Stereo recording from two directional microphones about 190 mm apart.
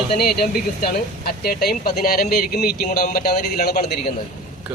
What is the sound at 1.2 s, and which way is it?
A man's voice, 55° left (ahead or behind).